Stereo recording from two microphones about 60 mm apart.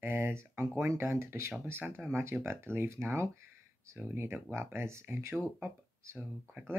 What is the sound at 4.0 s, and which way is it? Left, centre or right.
Speech, right.